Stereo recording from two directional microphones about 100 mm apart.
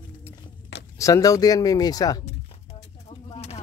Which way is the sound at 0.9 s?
30° left (ahead or behind).